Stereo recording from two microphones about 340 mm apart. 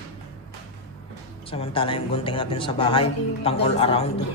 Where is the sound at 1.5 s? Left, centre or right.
Centre.